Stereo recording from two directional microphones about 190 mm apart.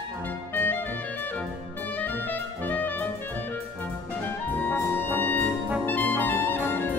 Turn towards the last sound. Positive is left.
turn(degrees=10)  # may be behind; listen again after turning